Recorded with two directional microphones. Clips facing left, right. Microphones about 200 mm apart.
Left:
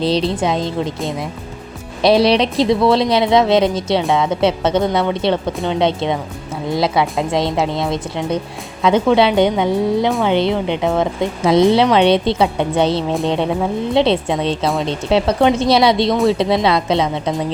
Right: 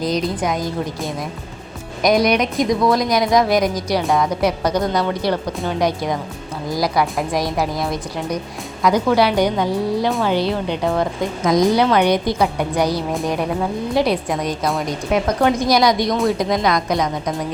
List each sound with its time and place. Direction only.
0.0 s a woman's voice: 30° left (ahead or behind)